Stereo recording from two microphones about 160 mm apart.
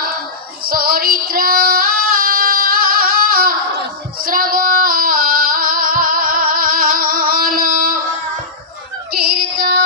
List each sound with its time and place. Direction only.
0.6 s female singing: 65° right (ahead or behind)
9.1 s female singing: 75° right (ahead or behind)